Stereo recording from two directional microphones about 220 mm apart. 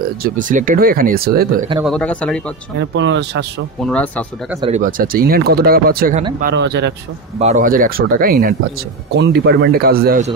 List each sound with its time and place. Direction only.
0.2 s speech: 35° right (ahead or behind)
1.8 s speech: centre (ahead or behind)
2.8 s a man's voice: 55° right (ahead or behind)
3.8 s speech: 5° left (ahead or behind)
4.6 s a man's voice: 30° right (ahead or behind); by 6.9 s 50° right (ahead or behind)
7.3 s speech: 35° right (ahead or behind)
9.1 s a man's voice: 50° right (ahead or behind)